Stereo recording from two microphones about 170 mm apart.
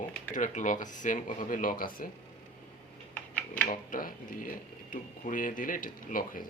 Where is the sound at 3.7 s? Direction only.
55° left (ahead or behind).